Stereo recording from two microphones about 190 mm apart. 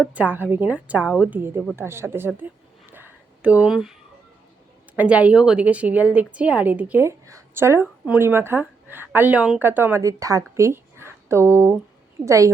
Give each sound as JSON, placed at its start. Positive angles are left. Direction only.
{"t": 0.1, "sound": "a woman's voice", "side_deg": -10}
{"t": 2.9, "sound": "a sound", "side_deg": -10}
{"t": 4.9, "sound": "a woman's voice", "side_deg": -5}